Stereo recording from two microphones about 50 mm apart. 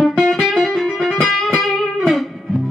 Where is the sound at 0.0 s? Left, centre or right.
Centre.